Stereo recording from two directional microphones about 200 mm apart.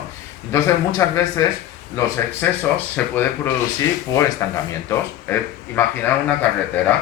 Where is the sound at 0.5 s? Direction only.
15° left (ahead or behind).